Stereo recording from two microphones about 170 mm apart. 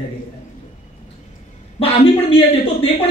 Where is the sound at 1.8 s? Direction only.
35° left (ahead or behind).